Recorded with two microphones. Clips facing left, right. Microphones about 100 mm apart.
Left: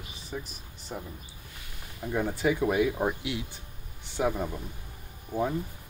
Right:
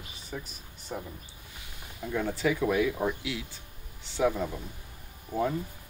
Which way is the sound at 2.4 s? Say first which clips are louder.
Left 1 dB; 30° left (ahead or behind).